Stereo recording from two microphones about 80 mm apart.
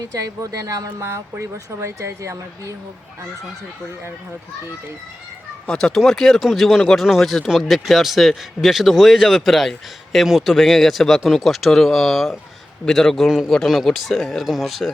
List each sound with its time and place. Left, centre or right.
0.0 s speech: right
5.6 s speech: centre